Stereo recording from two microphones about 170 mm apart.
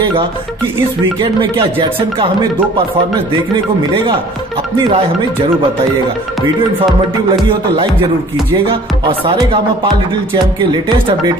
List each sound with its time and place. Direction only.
1.2 s speech: 30° right (ahead or behind)
3.5 s speech: 30° right (ahead or behind)
4.7 s music: 25° right (ahead or behind)
7.2 s music: 30° right (ahead or behind)
9.0 s speech: 30° right (ahead or behind)
10.3 s music: 25° right (ahead or behind)